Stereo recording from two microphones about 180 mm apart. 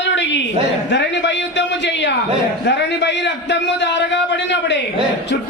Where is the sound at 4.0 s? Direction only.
75° left (ahead or behind).